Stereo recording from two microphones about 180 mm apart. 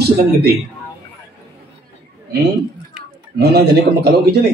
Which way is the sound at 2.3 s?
65° right (ahead or behind).